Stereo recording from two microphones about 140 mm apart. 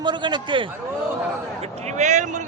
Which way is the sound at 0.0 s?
35° right (ahead or behind).